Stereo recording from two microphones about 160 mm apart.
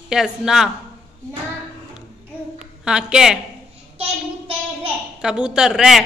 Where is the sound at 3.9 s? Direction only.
35° right (ahead or behind).